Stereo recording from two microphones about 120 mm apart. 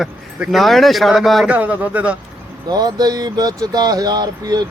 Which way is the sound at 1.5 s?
15° right (ahead or behind).